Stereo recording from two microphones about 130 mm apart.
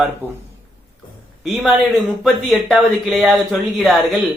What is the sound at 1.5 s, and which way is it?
Speech, centre (ahead or behind).